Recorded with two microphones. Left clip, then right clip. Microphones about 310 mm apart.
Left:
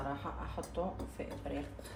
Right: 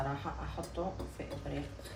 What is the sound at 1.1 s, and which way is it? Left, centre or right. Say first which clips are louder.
Speech: even; centre.